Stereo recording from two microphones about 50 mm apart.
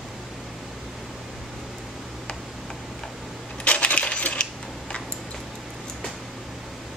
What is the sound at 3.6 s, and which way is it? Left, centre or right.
Coin, left.